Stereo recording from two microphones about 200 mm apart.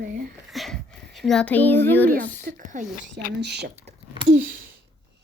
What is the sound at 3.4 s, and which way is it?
Speech, 55° right (ahead or behind).